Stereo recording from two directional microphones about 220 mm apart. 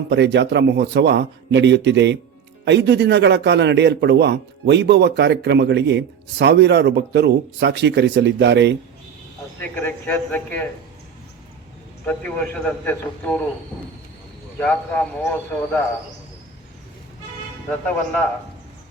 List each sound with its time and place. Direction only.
0.1 s a man's voice: 50° right (ahead or behind)
9.6 s a man's voice: 10° left (ahead or behind)
12.0 s a man's voice: 5° left (ahead or behind)
14.6 s speech: 5° left (ahead or behind)